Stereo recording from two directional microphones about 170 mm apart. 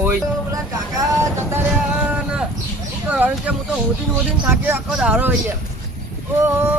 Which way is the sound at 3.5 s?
10° right (ahead or behind).